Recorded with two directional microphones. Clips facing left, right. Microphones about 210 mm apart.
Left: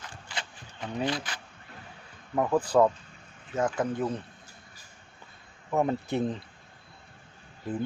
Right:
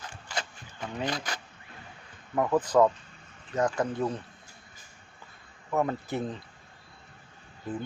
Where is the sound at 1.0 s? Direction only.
45° right (ahead or behind).